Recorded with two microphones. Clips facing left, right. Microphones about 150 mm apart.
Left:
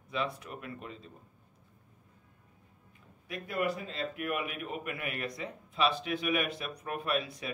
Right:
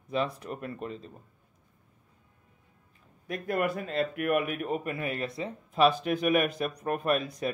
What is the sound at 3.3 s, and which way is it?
Speech, 50° right (ahead or behind).